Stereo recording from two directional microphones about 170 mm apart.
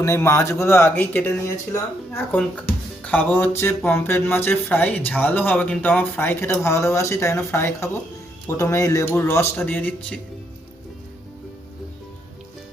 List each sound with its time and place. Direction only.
0.0 s speech: 15° left (ahead or behind)